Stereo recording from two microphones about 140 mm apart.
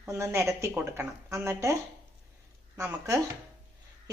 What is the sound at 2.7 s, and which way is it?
Speech, 20° right (ahead or behind).